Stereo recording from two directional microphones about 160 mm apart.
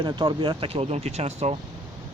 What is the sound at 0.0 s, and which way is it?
Speech, 30° right (ahead or behind).